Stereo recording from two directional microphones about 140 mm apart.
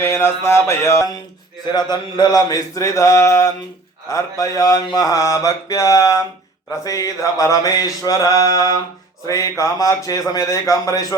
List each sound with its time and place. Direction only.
0.0 s mantra: 15° left (ahead or behind)
1.7 s mantra: 30° left (ahead or behind)